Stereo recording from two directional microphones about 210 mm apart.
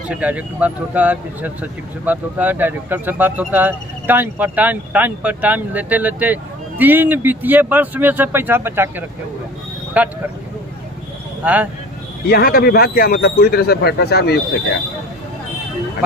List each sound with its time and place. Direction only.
0.1 s speech: 5° right (ahead or behind)
11.4 s speech: 10° right (ahead or behind)
12.3 s speech: 45° left (ahead or behind)